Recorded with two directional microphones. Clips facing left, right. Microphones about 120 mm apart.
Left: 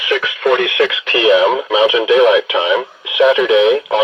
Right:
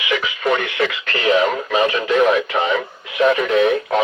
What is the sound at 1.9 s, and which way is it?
Speech, 90° left.